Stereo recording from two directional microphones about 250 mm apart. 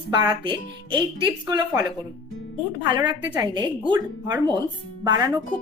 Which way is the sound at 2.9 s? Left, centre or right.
Centre.